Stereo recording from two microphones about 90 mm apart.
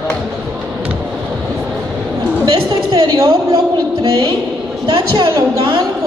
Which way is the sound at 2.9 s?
50° right (ahead or behind).